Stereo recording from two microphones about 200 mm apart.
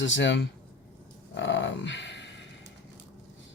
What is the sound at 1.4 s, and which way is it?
Dog, 65° left (ahead or behind).